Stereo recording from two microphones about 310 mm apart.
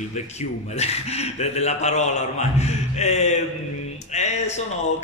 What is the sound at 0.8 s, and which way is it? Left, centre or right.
A man's voice, centre.